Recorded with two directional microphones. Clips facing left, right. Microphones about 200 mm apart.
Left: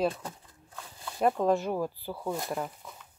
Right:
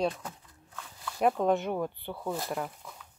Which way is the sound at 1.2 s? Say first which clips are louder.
Even; centre (ahead or behind).